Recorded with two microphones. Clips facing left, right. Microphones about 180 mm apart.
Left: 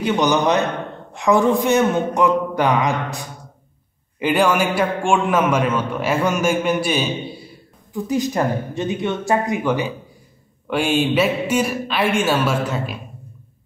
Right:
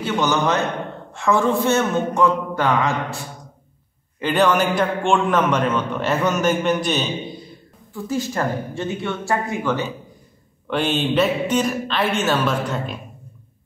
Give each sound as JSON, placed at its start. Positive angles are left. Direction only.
{"t": 0.0, "sound": "a man's voice", "side_deg": 15}